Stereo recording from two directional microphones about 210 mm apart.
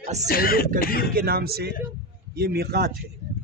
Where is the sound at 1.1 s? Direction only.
45° right (ahead or behind).